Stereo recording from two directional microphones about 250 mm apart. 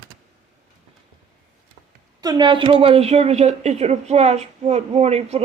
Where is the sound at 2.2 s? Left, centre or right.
Centre.